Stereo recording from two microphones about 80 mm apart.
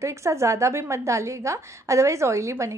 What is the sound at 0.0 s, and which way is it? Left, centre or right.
A woman's voice, right.